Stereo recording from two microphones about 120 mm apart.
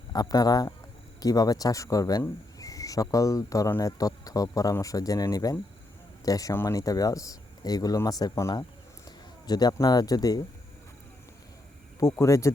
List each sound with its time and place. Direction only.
0.1 s speech: 30° left (ahead or behind)
11.9 s speech: 25° left (ahead or behind)